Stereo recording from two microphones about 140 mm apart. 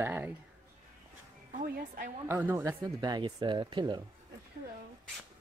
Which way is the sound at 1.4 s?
80° right.